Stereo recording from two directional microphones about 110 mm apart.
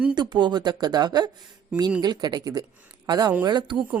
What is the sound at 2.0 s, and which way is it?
Speech, 40° right (ahead or behind).